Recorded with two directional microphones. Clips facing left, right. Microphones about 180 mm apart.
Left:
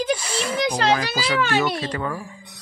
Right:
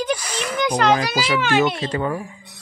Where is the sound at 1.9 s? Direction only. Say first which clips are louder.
Right 4 dB; 25° right (ahead or behind).